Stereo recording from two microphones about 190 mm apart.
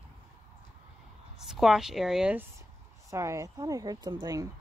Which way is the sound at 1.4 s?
Centre (ahead or behind).